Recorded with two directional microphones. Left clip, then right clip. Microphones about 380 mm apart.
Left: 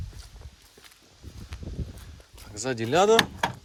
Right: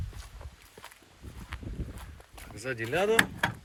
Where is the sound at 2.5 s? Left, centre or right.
Centre.